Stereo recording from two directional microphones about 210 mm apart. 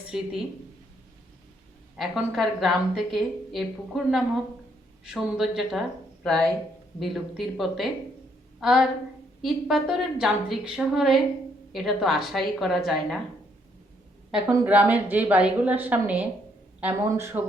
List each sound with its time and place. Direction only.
0.1 s a woman's voice: 5° right (ahead or behind)
2.0 s a woman's voice: centre (ahead or behind)
14.3 s a woman's voice: 5° right (ahead or behind)